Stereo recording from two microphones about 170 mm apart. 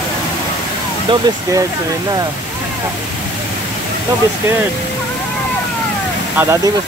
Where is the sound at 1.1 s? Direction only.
30° right (ahead or behind).